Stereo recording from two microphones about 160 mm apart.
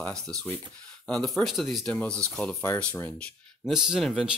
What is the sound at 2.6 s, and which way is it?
Speech, 15° left (ahead or behind).